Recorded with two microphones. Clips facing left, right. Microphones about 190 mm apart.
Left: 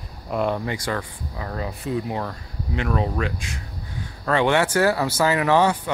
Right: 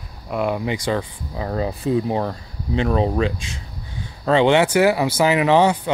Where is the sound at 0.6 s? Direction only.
20° right (ahead or behind).